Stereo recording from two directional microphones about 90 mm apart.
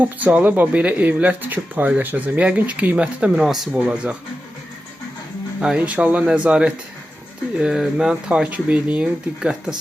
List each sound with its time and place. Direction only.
0.0 s speech: 15° right (ahead or behind); by 3.7 s centre (ahead or behind)
3.8 s speech: 15° right (ahead or behind)
5.5 s speech: 10° right (ahead or behind)